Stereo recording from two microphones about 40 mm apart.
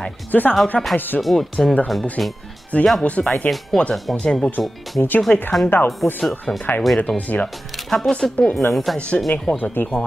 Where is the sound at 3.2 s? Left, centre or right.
Centre.